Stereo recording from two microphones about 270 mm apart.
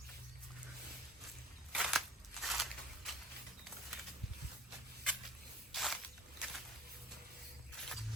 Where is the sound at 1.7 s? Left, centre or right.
Centre.